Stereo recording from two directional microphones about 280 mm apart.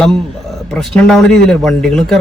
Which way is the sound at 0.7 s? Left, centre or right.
Centre.